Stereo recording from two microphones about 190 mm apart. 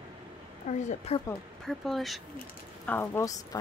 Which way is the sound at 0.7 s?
35° left (ahead or behind).